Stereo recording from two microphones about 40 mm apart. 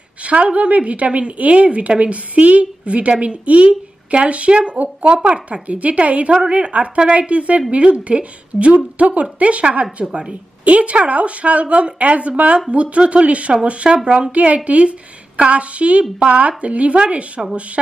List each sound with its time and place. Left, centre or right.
0.2 s a woman's voice: right
16.4 s a woman's voice: right